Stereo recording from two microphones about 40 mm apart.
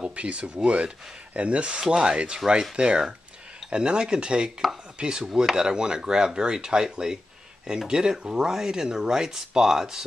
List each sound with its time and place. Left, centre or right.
0.0 s speech: right; by 10.0 s centre